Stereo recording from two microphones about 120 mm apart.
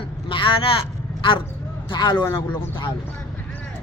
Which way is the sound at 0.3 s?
45° left (ahead or behind).